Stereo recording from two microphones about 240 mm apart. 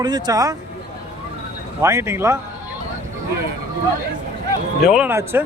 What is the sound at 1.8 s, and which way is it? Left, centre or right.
Speech, centre.